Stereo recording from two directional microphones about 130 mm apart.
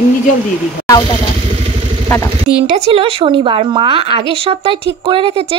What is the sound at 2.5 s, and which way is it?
Speech, 55° right (ahead or behind).